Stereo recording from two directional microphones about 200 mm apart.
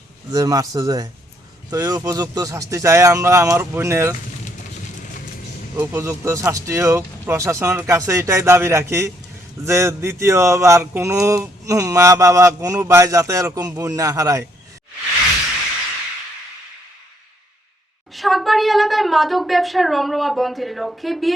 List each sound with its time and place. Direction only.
0.3 s speech: 15° right (ahead or behind)
5.7 s speech: 10° right (ahead or behind)
18.1 s speech: centre (ahead or behind)